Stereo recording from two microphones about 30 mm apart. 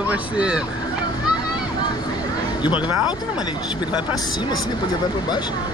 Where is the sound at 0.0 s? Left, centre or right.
Right.